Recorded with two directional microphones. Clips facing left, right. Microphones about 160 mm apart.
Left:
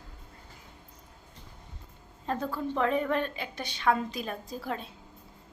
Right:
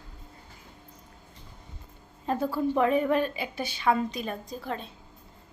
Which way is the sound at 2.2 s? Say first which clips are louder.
Right 5 dB; 10° right (ahead or behind).